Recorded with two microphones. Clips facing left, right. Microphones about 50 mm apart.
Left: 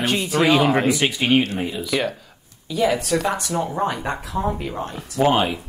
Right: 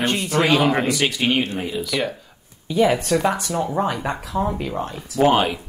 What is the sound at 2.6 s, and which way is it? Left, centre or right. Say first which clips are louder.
Speech: right 2 dB; centre.